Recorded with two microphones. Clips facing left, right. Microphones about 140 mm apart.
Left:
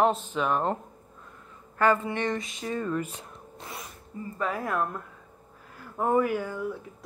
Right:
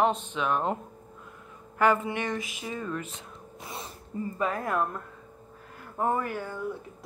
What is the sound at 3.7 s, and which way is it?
Sneeze, 30° right (ahead or behind).